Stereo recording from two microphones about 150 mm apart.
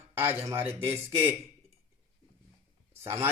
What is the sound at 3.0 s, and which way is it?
Speech, 15° right (ahead or behind).